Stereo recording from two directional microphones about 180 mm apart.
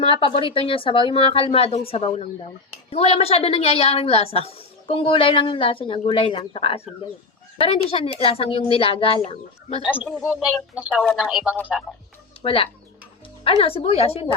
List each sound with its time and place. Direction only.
0.0 s a woman's voice: 30° left (ahead or behind)
9.8 s speech: 5° right (ahead or behind)
12.4 s a woman's voice: 30° left (ahead or behind)